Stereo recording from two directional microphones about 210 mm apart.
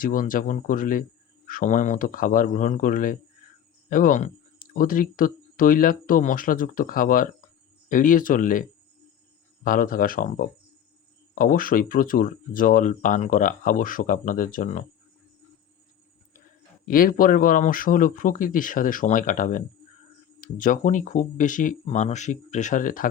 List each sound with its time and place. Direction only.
0.0 s speech: 40° left (ahead or behind)
9.6 s speech: 40° left (ahead or behind)
16.8 s speech: 40° left (ahead or behind)